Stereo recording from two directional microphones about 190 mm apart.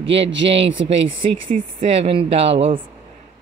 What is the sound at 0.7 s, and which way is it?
Speech, 30° right (ahead or behind).